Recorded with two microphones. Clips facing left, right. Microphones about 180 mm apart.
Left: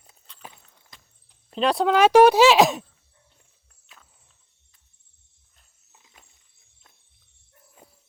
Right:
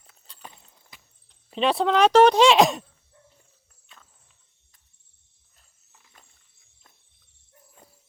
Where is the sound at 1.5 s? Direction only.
Centre (ahead or behind).